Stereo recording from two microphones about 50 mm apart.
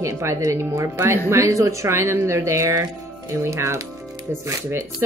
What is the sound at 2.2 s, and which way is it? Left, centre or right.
Speech, right.